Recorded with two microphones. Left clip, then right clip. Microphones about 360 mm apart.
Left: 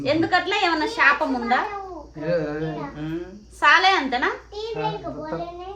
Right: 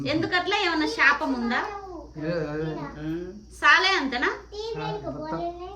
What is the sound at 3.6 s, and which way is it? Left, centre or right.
Speech, centre.